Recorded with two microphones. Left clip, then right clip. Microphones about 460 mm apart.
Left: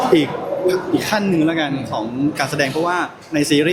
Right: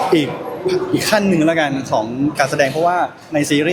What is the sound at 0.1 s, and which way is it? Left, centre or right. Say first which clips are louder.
Speech: left 1 dB; centre.